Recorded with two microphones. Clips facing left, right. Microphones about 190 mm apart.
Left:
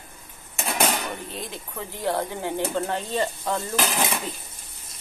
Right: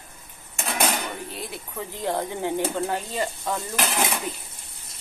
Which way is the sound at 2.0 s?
15° right (ahead or behind).